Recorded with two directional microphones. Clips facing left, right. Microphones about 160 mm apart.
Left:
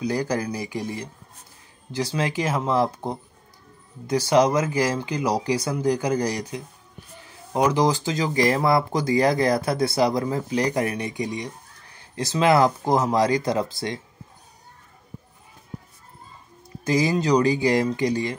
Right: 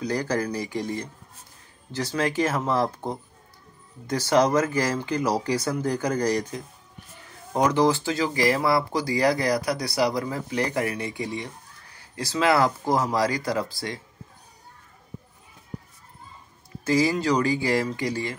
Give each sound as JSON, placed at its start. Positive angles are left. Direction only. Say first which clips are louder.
{"t": 0.0, "sound": "speech", "louder": "left 1 dB", "side_deg": 10}
{"t": 16.8, "sound": "speech", "louder": "left 1 dB", "side_deg": 20}